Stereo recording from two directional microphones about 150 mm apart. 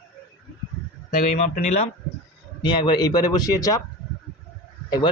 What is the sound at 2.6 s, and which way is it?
Speech, 30° left (ahead or behind).